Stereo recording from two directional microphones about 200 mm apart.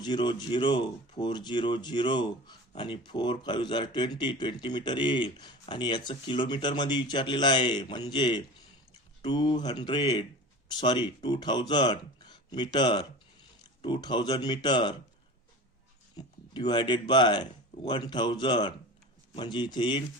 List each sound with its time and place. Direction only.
0.0 s speech: 20° left (ahead or behind)
16.1 s speech: 20° left (ahead or behind)